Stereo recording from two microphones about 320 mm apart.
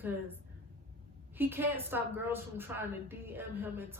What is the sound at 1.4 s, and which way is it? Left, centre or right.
Speech, centre.